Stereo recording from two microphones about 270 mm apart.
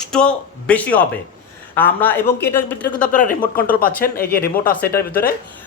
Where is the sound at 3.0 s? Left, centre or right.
Left.